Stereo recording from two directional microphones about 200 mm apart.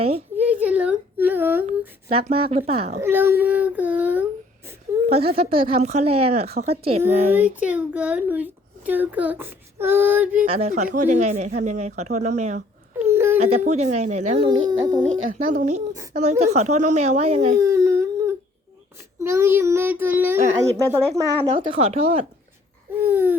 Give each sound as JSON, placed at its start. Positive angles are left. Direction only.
{"t": 0.3, "sound": "whimper", "side_deg": -5}
{"t": 2.0, "sound": "speech", "side_deg": -30}
{"t": 3.0, "sound": "a child's voice", "side_deg": -10}
{"t": 5.0, "sound": "speech", "side_deg": -30}
{"t": 7.3, "sound": "a child's voice", "side_deg": -5}
{"t": 10.4, "sound": "speech", "side_deg": -30}
{"t": 13.0, "sound": "a sound", "side_deg": -10}
{"t": 13.4, "sound": "speech", "side_deg": -30}
{"t": 15.3, "sound": "speech", "side_deg": -40}
{"t": 17.6, "sound": "a sound", "side_deg": -15}
{"t": 19.2, "sound": "a child's voice", "side_deg": -15}
{"t": 21.1, "sound": "speech", "side_deg": -30}
{"t": 23.0, "sound": "a child's voice", "side_deg": -10}